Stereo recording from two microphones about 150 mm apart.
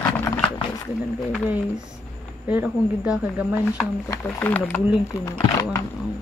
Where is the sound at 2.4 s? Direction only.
10° right (ahead or behind).